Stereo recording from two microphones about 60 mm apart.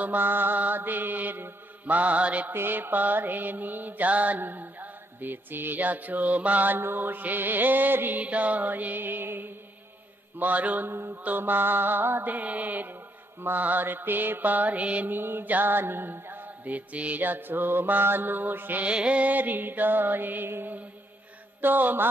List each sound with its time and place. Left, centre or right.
0.0 s mantra: right
2.5 s mantra: right
10.4 s mantra: right
10.9 s mantra: right
15.1 s mantra: right
18.9 s mantra: centre